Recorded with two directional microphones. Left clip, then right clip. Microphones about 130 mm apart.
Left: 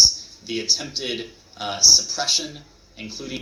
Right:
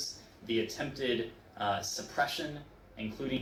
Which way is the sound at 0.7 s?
10° right (ahead or behind).